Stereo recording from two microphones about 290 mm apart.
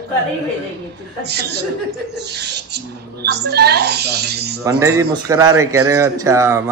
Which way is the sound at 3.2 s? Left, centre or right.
Right.